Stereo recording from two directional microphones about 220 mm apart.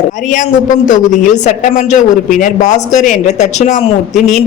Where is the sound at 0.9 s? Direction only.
35° left (ahead or behind).